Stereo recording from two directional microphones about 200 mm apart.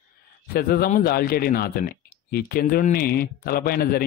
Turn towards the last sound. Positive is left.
turn(degrees=50)  # may be behind; listen again after turning